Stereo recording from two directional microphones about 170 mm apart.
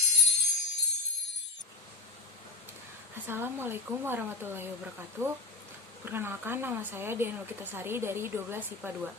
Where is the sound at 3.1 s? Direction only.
15° right (ahead or behind).